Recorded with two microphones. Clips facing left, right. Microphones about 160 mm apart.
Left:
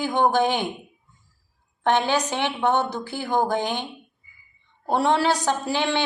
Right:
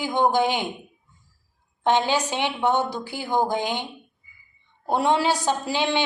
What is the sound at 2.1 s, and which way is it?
Speech, 15° right (ahead or behind).